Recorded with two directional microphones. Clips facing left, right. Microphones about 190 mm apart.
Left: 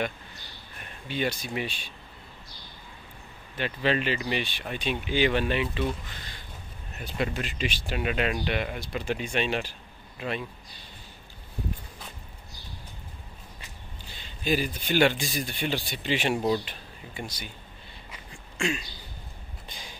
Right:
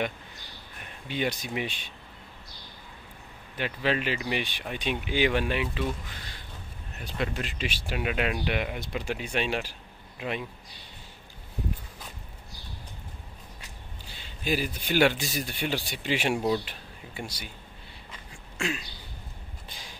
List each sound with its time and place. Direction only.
1.0 s speech: 15° right (ahead or behind)
3.5 s speech: 10° right (ahead or behind)
7.2 s speech: centre (ahead or behind)
14.1 s speech: 10° right (ahead or behind)
18.3 s a sound: 5° right (ahead or behind)